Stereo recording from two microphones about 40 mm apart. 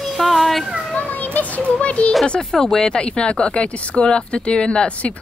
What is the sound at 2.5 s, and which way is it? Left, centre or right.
Speech, centre.